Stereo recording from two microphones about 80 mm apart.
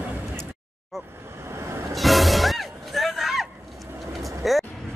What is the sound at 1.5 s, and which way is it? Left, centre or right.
Vehicle, right.